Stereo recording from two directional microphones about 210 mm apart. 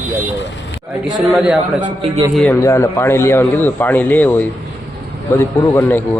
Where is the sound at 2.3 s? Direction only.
Centre (ahead or behind).